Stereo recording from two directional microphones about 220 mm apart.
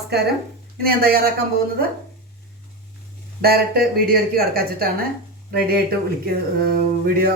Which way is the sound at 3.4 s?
45° right (ahead or behind).